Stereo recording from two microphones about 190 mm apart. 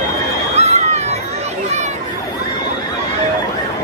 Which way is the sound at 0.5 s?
35° right (ahead or behind).